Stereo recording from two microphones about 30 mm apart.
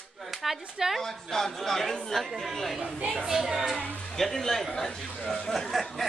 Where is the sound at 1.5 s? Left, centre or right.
Centre.